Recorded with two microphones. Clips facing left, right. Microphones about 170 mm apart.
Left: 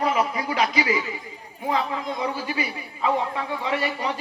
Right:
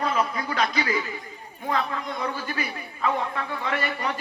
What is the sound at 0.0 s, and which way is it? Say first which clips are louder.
A man's voice: left 2 dB; 15° left (ahead or behind).